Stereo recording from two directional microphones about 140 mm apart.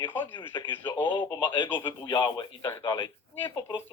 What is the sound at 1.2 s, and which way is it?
Speech, 35° left (ahead or behind).